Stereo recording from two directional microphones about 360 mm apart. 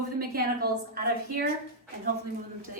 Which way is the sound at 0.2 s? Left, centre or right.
Right.